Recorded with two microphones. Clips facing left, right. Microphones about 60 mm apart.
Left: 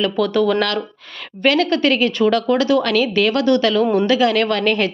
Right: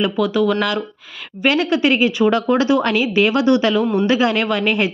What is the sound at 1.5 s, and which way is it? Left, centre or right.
A woman's voice, centre.